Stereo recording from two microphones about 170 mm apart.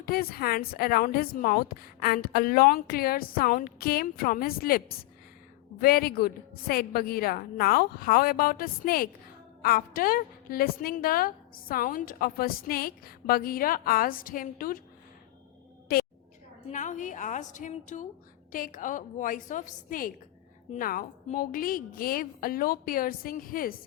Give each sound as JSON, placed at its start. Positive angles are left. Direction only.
{"t": 0.0, "sound": "a woman's voice", "side_deg": 60}
{"t": 5.8, "sound": "a woman's voice", "side_deg": 65}
{"t": 16.7, "sound": "a woman's voice", "side_deg": 45}